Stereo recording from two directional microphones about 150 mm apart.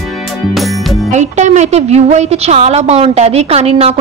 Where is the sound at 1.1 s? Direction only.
50° right (ahead or behind).